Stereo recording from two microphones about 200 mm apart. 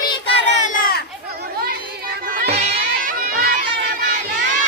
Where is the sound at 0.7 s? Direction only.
50° left (ahead or behind).